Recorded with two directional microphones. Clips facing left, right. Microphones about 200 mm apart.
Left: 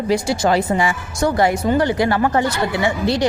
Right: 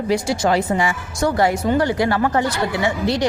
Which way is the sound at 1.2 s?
20° left (ahead or behind).